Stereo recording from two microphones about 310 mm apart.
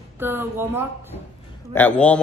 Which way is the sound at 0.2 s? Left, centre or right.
Centre.